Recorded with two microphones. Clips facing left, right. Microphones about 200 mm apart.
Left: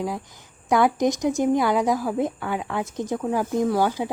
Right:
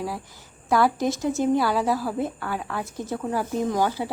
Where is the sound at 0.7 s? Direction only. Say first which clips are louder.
Left 2 dB; 20° left (ahead or behind).